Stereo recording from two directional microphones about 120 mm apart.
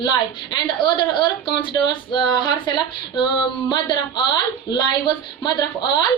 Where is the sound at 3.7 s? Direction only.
40° left (ahead or behind).